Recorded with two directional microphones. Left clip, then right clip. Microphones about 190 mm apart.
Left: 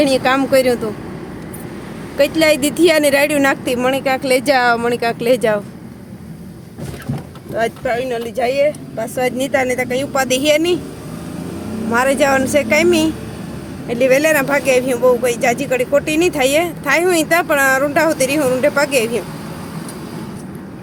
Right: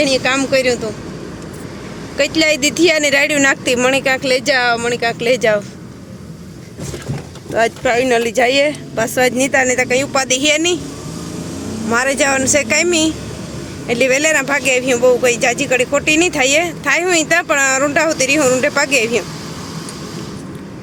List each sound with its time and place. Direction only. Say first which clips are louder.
0.0 s speech: left 1 dB; 20° left (ahead or behind)
2.1 s speech: left 1 dB; 10° left (ahead or behind)
7.5 s speech: right 4 dB; 10° right (ahead or behind)
11.9 s speech: left 1 dB; 5° left (ahead or behind)